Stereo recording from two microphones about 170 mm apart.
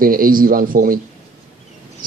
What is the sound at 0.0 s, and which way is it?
Speech, 55° right (ahead or behind).